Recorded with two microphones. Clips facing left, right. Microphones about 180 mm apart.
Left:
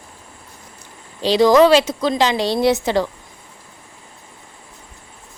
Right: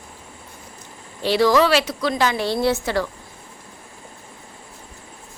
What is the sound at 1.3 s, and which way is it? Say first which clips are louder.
Speech: left 5 dB; 20° left (ahead or behind).